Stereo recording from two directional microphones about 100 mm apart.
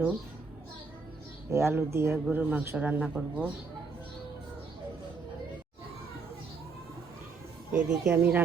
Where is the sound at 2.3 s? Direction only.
15° right (ahead or behind).